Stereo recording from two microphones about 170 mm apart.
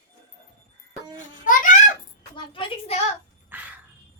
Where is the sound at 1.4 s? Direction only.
50° left (ahead or behind).